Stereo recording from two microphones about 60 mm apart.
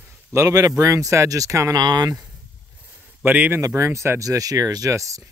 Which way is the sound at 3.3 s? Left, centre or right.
Right.